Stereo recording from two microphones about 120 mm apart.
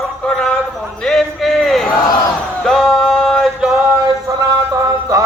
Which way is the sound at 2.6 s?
Centre (ahead or behind).